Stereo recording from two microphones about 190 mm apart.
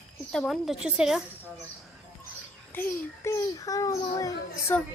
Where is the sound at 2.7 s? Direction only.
15° left (ahead or behind).